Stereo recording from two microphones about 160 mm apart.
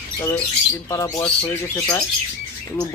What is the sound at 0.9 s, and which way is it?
Speech, 20° left (ahead or behind).